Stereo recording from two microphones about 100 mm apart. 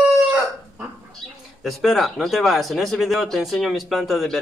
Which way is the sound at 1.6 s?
Centre (ahead or behind).